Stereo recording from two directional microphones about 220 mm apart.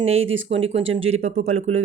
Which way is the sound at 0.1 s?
65° right (ahead or behind).